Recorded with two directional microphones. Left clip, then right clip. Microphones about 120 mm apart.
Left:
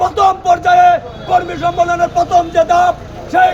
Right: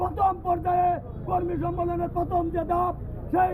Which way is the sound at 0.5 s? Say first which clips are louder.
Left 15 dB; 30° left (ahead or behind).